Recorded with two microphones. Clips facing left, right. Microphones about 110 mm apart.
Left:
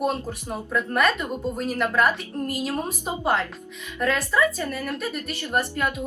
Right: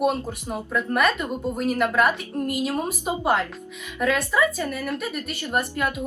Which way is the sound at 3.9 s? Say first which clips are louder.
Right 1 dB; 5° right (ahead or behind).